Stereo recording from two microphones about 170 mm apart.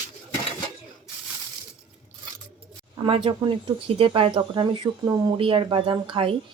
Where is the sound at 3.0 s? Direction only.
30° right (ahead or behind).